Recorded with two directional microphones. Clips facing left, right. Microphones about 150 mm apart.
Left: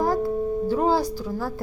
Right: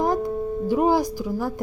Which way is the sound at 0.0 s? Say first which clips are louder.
Even; 20° right (ahead or behind).